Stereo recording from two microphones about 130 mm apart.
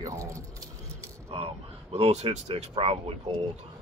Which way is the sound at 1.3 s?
50° right (ahead or behind).